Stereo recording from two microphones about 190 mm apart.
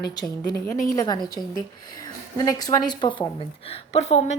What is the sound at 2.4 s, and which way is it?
A woman's voice, 20° left (ahead or behind).